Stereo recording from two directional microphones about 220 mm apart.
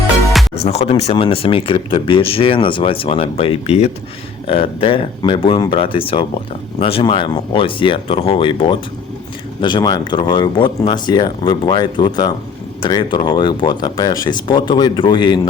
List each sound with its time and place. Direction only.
0.5 s speech: 30° left (ahead or behind)